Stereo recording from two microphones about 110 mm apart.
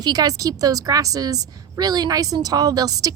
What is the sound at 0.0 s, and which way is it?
A woman's voice, 40° right (ahead or behind).